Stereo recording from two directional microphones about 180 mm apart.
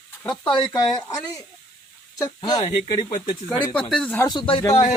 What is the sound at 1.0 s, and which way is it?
Speech, 15° left (ahead or behind).